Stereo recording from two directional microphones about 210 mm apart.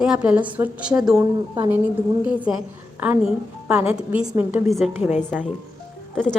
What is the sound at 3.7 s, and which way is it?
A woman's voice, 5° right (ahead or behind).